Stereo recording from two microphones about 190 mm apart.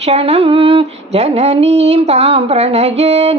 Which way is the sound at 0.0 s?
35° right (ahead or behind).